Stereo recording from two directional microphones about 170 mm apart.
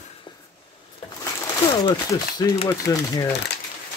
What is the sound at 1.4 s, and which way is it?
A man's voice, 20° left (ahead or behind).